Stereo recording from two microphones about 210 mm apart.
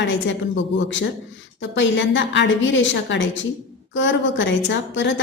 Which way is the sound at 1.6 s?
60° left (ahead or behind).